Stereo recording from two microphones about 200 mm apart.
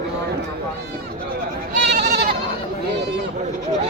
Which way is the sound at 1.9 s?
55° right (ahead or behind).